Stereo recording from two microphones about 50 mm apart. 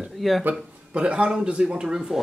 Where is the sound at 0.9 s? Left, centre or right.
Right.